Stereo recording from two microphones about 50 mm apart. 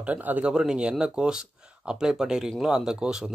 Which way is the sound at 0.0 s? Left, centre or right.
Right.